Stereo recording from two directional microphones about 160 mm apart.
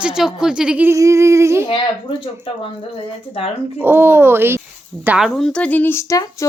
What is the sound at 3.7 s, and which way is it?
A woman's voice, 15° right (ahead or behind).